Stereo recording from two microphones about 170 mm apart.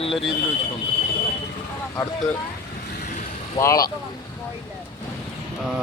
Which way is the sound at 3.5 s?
20° left (ahead or behind).